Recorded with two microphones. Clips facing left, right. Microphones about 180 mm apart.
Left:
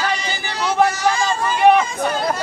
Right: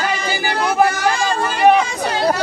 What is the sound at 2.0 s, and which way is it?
Chatter, 80° right.